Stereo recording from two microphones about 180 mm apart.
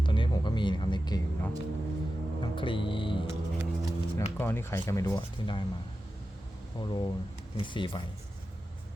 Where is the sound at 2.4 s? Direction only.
30° left (ahead or behind).